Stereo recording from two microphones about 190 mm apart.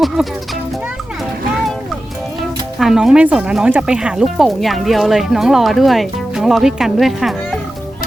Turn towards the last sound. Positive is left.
turn(degrees=0)  # may be behind; listen again after turning